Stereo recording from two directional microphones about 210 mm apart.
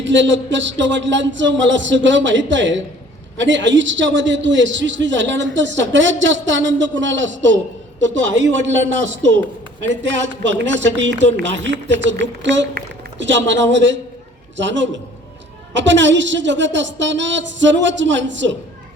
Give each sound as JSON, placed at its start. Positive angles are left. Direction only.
{"t": 0.0, "sound": "a man's voice", "side_deg": -60}
{"t": 10.0, "sound": "a man's voice", "side_deg": -60}